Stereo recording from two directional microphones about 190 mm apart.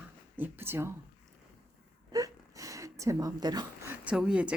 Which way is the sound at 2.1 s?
20° right (ahead or behind).